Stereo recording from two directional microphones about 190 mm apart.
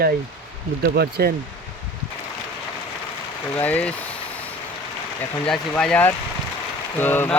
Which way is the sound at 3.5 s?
10° left (ahead or behind).